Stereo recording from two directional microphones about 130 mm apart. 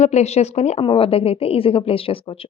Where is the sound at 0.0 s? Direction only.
60° left (ahead or behind).